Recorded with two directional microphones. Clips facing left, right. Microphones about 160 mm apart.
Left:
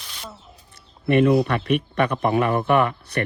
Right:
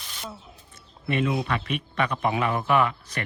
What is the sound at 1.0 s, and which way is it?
Speech, 55° left (ahead or behind).